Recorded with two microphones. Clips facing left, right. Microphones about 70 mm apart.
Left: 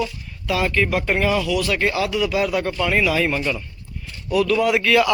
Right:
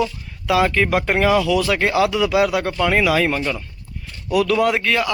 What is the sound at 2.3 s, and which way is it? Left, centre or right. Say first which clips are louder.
Speech: right 3 dB; right.